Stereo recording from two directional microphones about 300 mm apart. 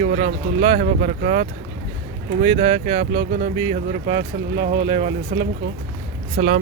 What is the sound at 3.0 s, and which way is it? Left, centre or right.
Speech, right.